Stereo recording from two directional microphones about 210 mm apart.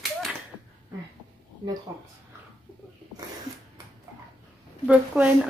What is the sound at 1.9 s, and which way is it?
Speech, 15° right (ahead or behind).